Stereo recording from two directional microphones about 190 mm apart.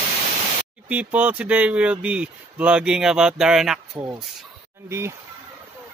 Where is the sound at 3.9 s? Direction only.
20° right (ahead or behind).